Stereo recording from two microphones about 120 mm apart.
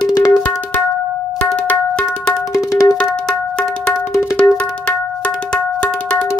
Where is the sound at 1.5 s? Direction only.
10° left (ahead or behind).